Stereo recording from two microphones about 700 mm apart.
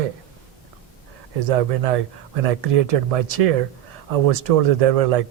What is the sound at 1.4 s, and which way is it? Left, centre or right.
Speech, right.